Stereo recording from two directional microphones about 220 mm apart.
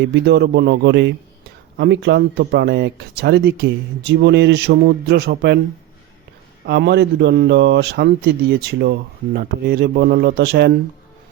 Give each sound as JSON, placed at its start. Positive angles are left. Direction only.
{"t": 0.0, "sound": "speech", "side_deg": -50}
{"t": 6.7, "sound": "speech", "side_deg": -50}